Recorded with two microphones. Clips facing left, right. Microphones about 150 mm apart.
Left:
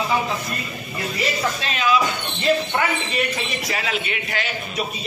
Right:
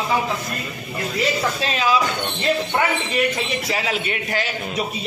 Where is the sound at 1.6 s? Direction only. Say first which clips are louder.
Even; 35° right (ahead or behind).